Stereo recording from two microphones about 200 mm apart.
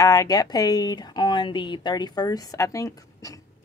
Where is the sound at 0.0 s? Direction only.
15° left (ahead or behind).